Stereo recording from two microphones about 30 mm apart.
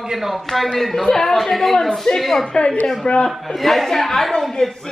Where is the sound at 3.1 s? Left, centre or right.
Left.